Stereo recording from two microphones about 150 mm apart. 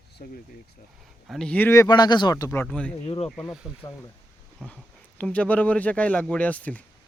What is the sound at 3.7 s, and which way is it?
Speech, 20° left (ahead or behind).